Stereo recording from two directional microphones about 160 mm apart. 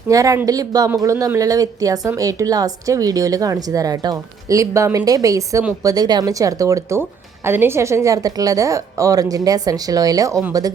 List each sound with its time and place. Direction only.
0.1 s a woman's voice: 20° right (ahead or behind)